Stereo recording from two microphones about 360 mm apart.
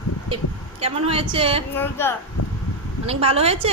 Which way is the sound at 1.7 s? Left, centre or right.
Centre.